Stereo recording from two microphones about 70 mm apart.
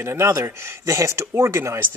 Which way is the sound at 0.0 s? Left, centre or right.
Right.